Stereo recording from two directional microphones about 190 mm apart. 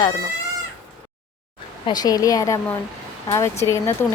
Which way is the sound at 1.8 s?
20° left (ahead or behind).